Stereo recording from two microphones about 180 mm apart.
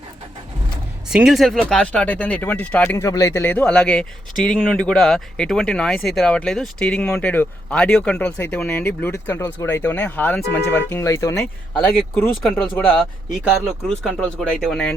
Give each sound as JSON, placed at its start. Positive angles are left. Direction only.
{"t": 1.0, "sound": "speech", "side_deg": -5}
{"t": 11.8, "sound": "speech", "side_deg": 5}